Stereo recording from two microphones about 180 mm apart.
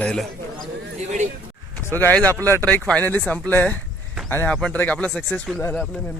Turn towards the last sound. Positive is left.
turn(degrees=0)  # may be behind; listen again after turning